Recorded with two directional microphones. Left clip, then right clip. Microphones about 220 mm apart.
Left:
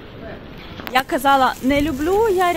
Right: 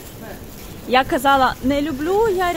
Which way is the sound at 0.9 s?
10° right (ahead or behind).